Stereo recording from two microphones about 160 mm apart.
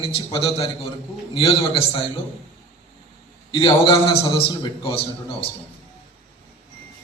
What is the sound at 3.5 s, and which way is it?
A man's voice, 35° left (ahead or behind).